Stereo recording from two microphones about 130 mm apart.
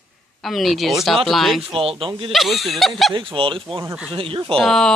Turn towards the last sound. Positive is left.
turn(degrees=5)  # may be behind; listen again after turning